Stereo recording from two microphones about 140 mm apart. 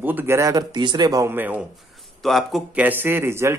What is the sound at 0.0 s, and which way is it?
Speech, 15° right (ahead or behind).